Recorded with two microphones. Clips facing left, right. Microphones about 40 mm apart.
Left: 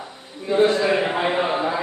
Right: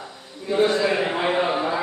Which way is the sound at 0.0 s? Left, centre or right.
Left.